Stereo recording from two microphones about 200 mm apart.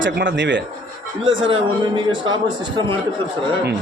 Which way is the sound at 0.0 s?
70° right (ahead or behind).